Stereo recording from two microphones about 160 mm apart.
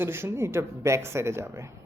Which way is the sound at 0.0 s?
15° right (ahead or behind).